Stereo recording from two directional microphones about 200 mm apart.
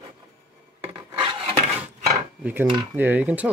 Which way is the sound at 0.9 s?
25° right (ahead or behind).